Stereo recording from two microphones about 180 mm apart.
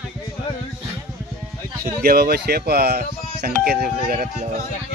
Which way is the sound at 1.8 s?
55° right (ahead or behind).